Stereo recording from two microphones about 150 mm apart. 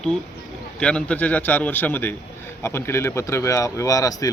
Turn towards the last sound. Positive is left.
turn(degrees=25)  # may be behind; listen again after turning